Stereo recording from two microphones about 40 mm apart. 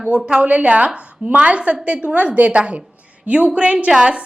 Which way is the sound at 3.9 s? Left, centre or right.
Centre.